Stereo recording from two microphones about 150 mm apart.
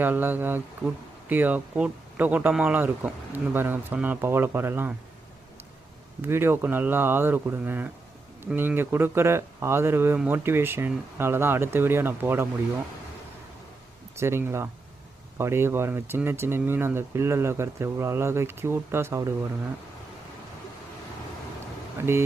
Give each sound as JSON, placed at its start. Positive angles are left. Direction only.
{"t": 0.0, "sound": "speech", "side_deg": -15}
{"t": 6.2, "sound": "speech", "side_deg": -15}
{"t": 14.2, "sound": "speech", "side_deg": -15}
{"t": 21.9, "sound": "speech", "side_deg": -15}